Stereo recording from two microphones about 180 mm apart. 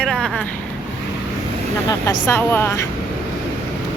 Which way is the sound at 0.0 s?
Centre (ahead or behind).